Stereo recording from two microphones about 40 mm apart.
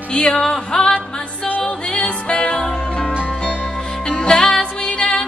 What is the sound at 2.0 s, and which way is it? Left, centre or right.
Music, left.